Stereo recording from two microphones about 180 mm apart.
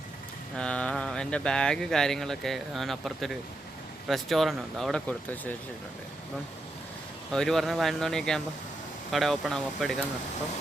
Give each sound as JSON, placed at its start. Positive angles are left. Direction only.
{"t": 0.5, "sound": "speech", "side_deg": 5}
{"t": 7.3, "sound": "speech", "side_deg": 0}